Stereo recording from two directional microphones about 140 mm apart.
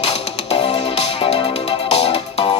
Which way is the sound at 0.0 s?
45° left (ahead or behind).